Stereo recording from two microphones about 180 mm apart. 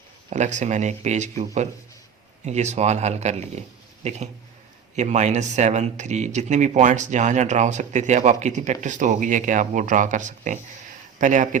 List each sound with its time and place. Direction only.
0.3 s speech: 40° right (ahead or behind)